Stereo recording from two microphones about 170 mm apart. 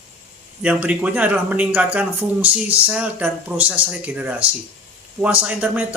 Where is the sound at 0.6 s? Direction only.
10° right (ahead or behind).